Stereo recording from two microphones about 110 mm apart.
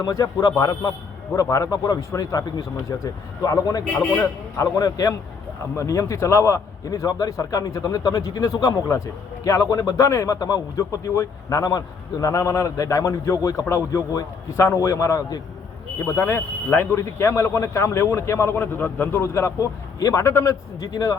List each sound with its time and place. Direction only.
0.0 s a man's voice: 30° left (ahead or behind)
3.9 s a man's voice: 20° left (ahead or behind)